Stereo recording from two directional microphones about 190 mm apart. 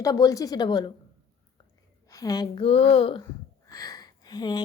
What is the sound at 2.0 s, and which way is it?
A woman's voice, 20° left (ahead or behind).